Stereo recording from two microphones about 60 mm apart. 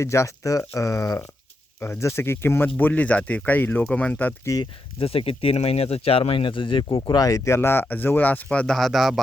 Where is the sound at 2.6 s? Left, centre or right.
Left.